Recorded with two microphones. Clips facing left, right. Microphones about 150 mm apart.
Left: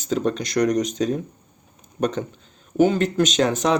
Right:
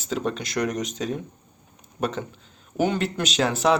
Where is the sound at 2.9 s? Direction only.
40° left (ahead or behind).